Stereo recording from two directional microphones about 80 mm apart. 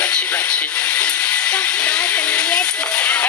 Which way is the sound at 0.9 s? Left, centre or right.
Centre.